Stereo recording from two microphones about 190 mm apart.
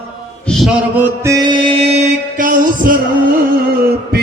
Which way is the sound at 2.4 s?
45° right (ahead or behind).